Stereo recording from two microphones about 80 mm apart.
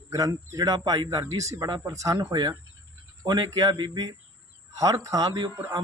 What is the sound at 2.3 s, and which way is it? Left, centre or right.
Speech, right.